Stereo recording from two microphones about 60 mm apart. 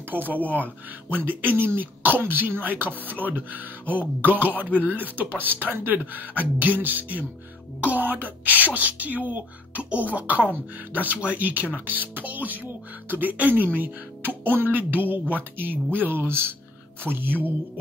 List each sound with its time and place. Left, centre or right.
0.1 s speech: right
0.4 s speech: left
1.1 s speech: right